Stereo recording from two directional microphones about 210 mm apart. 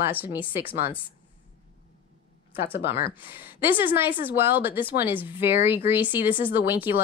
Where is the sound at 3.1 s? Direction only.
10° right (ahead or behind).